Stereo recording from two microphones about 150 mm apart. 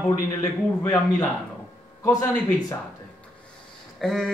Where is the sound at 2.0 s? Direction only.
15° left (ahead or behind).